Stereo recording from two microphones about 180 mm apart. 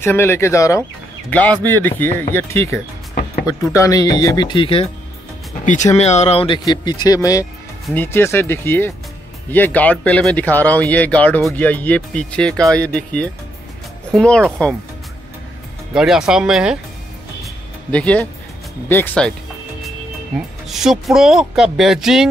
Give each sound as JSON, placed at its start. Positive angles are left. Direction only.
{"t": 0.0, "sound": "speech", "side_deg": 15}
{"t": 3.7, "sound": "speech", "side_deg": 20}
{"t": 5.7, "sound": "speech", "side_deg": 40}
{"t": 15.9, "sound": "speech", "side_deg": -5}
{"t": 17.9, "sound": "speech", "side_deg": 5}
{"t": 20.6, "sound": "speech", "side_deg": 0}